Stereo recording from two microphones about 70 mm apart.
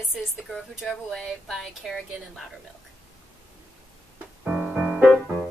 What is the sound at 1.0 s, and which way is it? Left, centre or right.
A woman's voice, centre.